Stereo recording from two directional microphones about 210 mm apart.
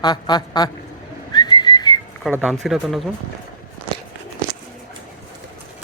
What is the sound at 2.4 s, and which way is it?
Speech, centre (ahead or behind).